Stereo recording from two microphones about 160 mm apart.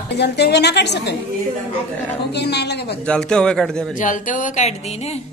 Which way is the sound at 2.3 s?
90° left.